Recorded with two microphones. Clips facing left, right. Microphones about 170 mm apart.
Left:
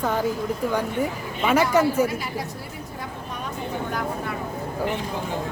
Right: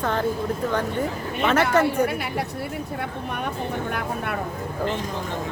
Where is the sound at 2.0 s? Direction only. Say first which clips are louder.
Right 2 dB; 65° right (ahead or behind).